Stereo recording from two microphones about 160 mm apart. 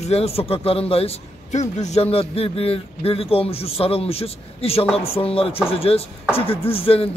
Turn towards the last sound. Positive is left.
turn(degrees=35)  # may be behind; listen again after turning